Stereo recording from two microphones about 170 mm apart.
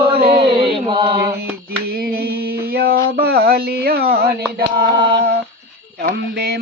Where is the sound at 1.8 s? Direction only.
65° right (ahead or behind).